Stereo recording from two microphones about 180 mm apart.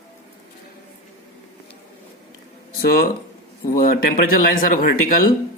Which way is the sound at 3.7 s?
50° left (ahead or behind).